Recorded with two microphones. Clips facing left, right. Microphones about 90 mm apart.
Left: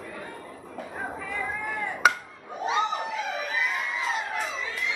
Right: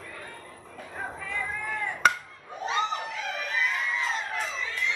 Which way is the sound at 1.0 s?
5° left (ahead or behind).